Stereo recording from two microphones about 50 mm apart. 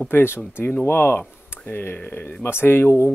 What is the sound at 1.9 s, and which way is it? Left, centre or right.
Speech, left.